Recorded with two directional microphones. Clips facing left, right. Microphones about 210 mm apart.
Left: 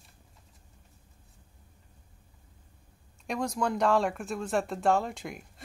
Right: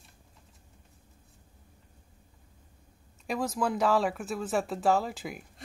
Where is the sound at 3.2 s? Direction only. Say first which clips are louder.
Even; 5° right (ahead or behind).